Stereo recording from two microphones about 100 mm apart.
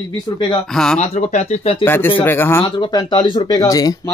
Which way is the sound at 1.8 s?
20° left (ahead or behind).